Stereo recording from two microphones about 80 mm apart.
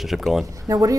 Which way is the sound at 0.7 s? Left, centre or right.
Right.